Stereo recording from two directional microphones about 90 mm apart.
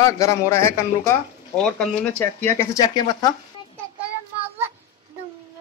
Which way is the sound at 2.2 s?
30° left (ahead or behind).